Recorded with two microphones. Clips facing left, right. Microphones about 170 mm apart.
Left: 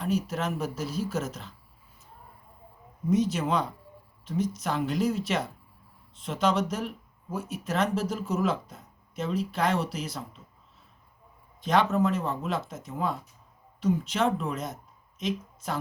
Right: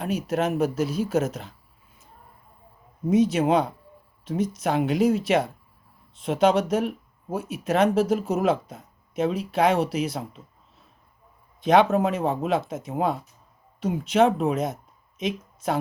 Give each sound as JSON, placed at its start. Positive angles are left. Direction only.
{"t": 0.0, "sound": "speech", "side_deg": -60}
{"t": 3.1, "sound": "speech", "side_deg": -60}
{"t": 11.6, "sound": "speech", "side_deg": -65}